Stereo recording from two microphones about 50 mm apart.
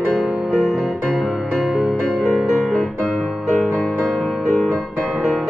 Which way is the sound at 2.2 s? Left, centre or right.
Centre.